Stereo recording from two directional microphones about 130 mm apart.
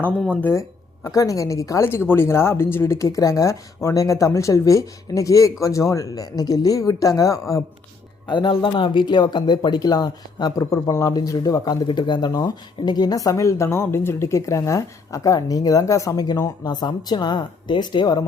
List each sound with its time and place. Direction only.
1.0 s speech: 25° left (ahead or behind)
8.3 s speech: 40° left (ahead or behind)